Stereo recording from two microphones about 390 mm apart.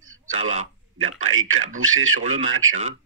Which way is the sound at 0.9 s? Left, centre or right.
Right.